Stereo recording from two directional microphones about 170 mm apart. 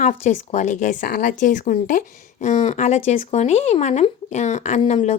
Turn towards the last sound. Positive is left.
turn(degrees=40)  # may be behind; listen again after turning